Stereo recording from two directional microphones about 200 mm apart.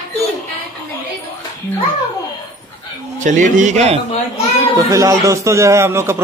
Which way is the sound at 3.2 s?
40° right (ahead or behind).